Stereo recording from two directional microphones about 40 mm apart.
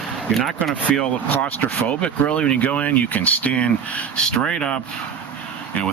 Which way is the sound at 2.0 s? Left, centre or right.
Left.